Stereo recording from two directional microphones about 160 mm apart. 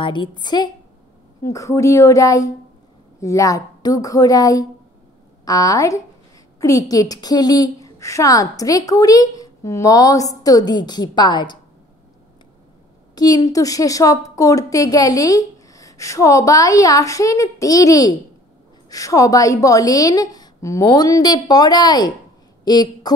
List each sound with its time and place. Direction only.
0.0 s a woman's voice: 30° left (ahead or behind)
13.1 s a woman's voice: 25° left (ahead or behind)